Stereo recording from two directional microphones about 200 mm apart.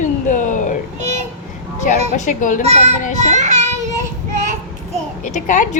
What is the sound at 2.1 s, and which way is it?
Speech, 40° left (ahead or behind).